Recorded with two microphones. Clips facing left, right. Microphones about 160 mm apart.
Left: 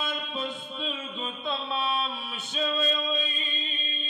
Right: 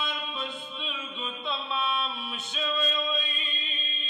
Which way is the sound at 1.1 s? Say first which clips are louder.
Left 2 dB; 45° left (ahead or behind).